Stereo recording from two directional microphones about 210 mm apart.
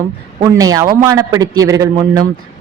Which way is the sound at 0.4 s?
15° right (ahead or behind).